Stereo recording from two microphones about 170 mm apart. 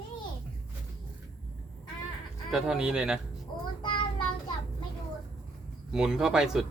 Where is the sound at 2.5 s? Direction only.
5° right (ahead or behind).